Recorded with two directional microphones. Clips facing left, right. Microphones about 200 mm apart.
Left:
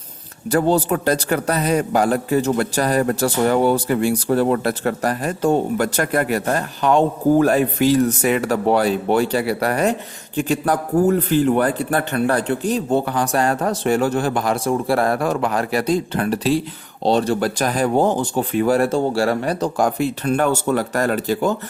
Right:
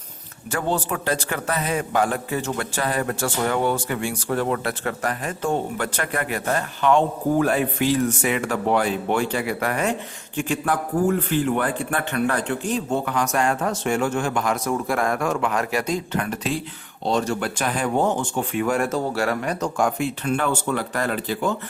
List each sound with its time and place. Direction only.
0.5 s a man's voice: 35° left (ahead or behind)